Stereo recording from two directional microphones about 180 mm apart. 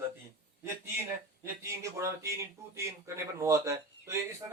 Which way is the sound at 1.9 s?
15° right (ahead or behind).